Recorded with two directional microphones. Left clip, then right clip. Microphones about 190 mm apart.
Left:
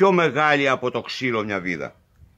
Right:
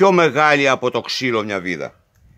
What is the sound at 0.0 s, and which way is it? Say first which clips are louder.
Speech: right 4 dB; 45° right (ahead or behind).